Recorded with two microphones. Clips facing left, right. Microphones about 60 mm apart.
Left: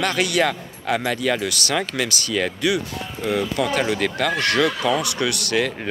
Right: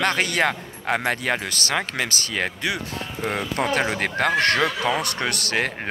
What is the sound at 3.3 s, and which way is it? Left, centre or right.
Speech, right.